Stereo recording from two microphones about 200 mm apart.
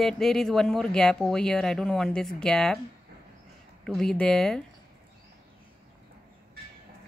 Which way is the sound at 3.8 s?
Centre (ahead or behind).